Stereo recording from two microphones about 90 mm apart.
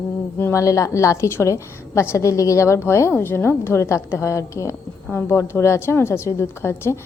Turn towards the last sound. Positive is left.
turn(degrees=25)  # may be behind; listen again after turning